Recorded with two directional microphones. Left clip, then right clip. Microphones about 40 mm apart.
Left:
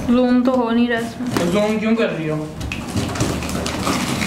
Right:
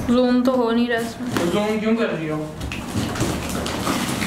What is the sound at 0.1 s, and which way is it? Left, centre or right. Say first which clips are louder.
Speech: left 2 dB; right.